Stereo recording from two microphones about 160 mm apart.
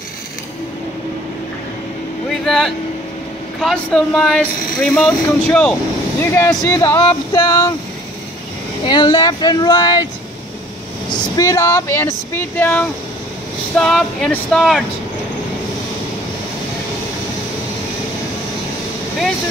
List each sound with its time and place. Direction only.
2.2 s vehicle: centre (ahead or behind)
3.5 s speech: 5° left (ahead or behind); by 7.7 s 20° left (ahead or behind)
8.8 s speech: 30° left (ahead or behind)
11.3 s speech: 20° left (ahead or behind); by 14.9 s centre (ahead or behind)